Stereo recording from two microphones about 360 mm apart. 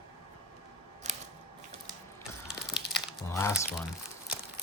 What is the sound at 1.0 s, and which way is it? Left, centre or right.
Scissors, centre.